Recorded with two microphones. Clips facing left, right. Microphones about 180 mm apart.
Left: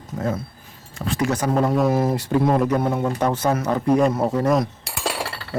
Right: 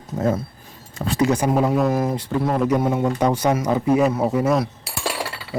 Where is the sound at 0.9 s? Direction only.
25° right (ahead or behind).